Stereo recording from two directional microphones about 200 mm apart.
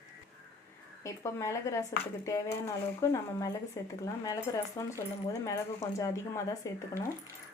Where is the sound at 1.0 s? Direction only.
15° left (ahead or behind).